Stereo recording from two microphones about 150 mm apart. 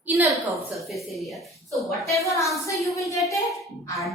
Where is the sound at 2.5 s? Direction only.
20° left (ahead or behind).